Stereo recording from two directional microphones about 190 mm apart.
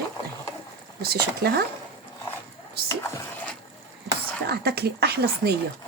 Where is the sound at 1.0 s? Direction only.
55° right (ahead or behind).